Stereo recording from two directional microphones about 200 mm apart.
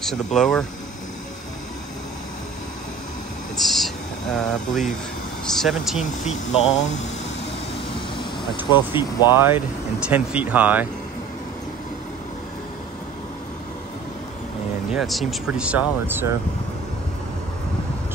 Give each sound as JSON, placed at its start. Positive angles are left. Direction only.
{"t": 0.0, "sound": "speech", "side_deg": 0}
{"t": 3.5, "sound": "a sound", "side_deg": 0}
{"t": 5.4, "sound": "speech", "side_deg": 0}
{"t": 6.2, "sound": "speech", "side_deg": 35}
{"t": 8.6, "sound": "speech", "side_deg": 25}
{"t": 9.3, "sound": "speech", "side_deg": -10}
{"t": 14.9, "sound": "speech", "side_deg": 0}